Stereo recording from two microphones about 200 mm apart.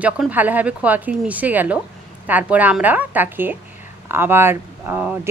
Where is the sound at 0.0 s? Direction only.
10° right (ahead or behind).